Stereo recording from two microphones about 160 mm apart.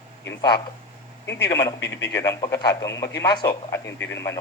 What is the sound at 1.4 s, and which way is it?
Speech, 20° left (ahead or behind).